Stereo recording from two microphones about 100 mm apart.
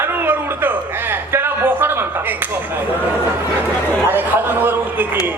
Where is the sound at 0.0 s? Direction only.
20° right (ahead or behind).